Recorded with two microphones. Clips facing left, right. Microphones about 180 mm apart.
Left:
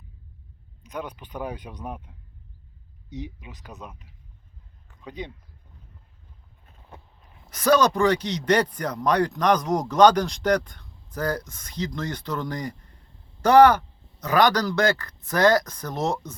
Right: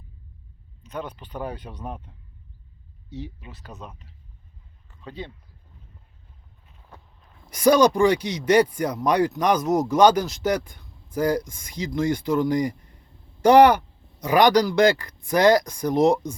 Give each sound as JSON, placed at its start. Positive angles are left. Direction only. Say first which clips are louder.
{"t": 0.8, "sound": "speech", "louder": "right 1 dB", "side_deg": 10}
{"t": 7.5, "sound": "speech", "louder": "right 3 dB", "side_deg": -15}